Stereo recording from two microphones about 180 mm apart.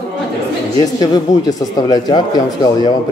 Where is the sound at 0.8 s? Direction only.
20° left (ahead or behind).